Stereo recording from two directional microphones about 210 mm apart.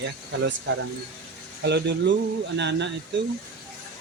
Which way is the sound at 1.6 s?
55° right (ahead or behind).